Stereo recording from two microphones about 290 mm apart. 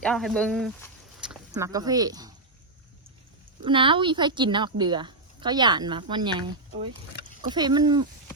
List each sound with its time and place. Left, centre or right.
0.0 s speech: centre
3.6 s speech: centre